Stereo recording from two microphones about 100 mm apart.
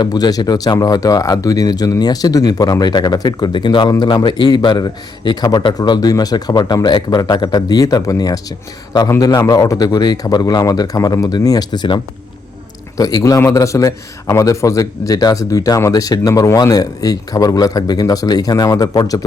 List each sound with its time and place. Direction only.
0.0 s a man's voice: 40° left (ahead or behind)
13.0 s speech: 35° left (ahead or behind)